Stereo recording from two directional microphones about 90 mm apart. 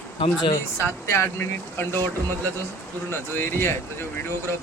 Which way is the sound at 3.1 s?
25° left (ahead or behind).